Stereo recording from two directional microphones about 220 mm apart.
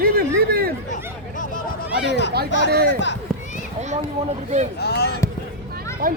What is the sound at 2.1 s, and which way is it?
Speech, 50° left (ahead or behind).